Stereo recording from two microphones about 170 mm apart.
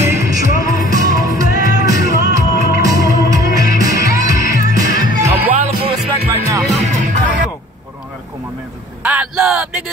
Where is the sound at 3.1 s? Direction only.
20° right (ahead or behind).